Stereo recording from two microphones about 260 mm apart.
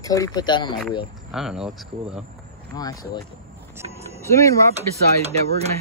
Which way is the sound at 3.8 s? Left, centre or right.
Right.